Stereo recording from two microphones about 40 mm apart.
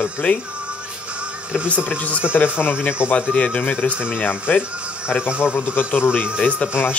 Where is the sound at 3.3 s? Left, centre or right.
Left.